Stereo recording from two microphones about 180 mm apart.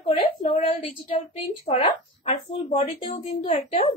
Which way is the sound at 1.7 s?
30° left (ahead or behind).